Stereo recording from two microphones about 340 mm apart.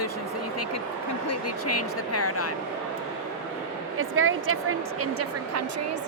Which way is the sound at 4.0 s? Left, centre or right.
Right.